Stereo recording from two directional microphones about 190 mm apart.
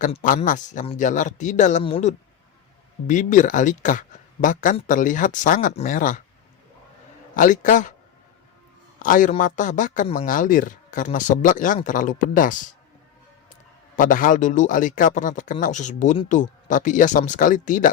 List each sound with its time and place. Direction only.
0.0 s speech: 45° left (ahead or behind)
7.3 s speech: 45° left (ahead or behind)
9.0 s a man's voice: 45° left (ahead or behind)
13.9 s speech: 45° left (ahead or behind)